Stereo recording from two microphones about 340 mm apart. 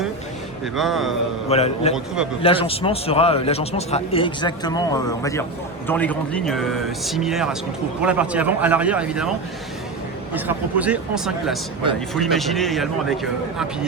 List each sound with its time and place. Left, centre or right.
0.6 s speech: centre
1.5 s a man's voice: centre
10.3 s speech: centre